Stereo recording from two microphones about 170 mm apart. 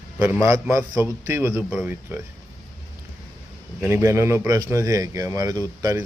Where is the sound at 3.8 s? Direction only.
15° right (ahead or behind).